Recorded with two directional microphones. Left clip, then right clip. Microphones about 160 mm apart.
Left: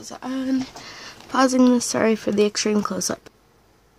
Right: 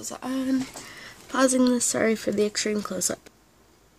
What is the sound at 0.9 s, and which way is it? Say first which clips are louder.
Speech: left 5 dB; 20° left (ahead or behind).